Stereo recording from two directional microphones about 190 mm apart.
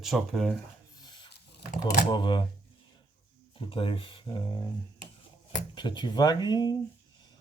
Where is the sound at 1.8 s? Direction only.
25° left (ahead or behind).